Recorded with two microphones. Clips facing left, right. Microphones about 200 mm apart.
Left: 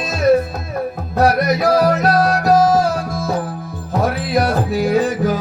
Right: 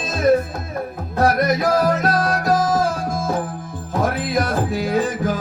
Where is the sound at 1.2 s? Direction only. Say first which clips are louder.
Left 2 dB; 50° right (ahead or behind).